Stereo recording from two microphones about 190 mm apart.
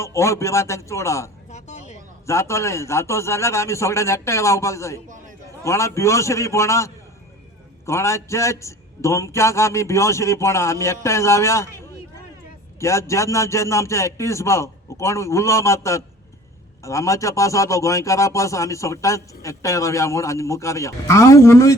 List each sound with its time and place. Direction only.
0.0 s a man's voice: 15° left (ahead or behind)
1.5 s a sound: 35° left (ahead or behind)
2.2 s a man's voice: 15° left (ahead or behind)
5.0 s a man's voice: 40° right (ahead or behind)
5.6 s a man's voice: 15° left (ahead or behind)
12.8 s a man's voice: 15° left (ahead or behind)